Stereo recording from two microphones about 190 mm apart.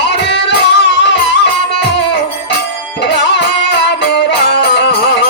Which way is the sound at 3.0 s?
65° left (ahead or behind).